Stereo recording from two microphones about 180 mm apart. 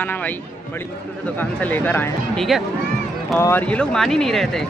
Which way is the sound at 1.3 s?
10° left (ahead or behind).